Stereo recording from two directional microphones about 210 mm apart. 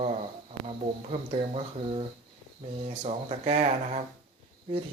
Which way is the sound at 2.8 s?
30° right (ahead or behind).